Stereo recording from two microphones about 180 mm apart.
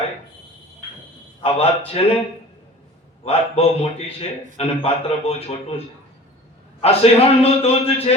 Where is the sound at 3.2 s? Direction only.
35° left (ahead or behind).